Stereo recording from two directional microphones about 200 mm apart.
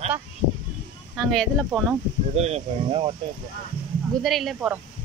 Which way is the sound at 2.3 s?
30° right (ahead or behind).